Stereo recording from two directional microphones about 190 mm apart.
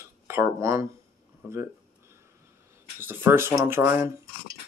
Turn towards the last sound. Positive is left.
turn(degrees=-15)  # may be behind; listen again after turning